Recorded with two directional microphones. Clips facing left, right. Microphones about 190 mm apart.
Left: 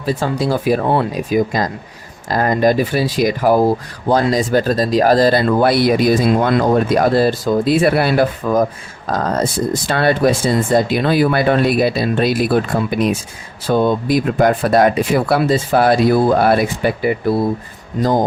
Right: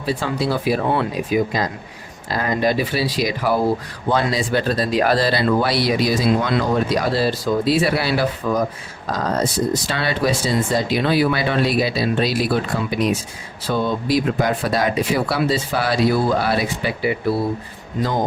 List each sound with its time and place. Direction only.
0.0 s speech: 45° left (ahead or behind)